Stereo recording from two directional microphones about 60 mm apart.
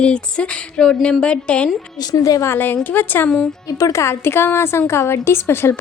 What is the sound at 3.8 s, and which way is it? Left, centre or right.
A woman's voice, left.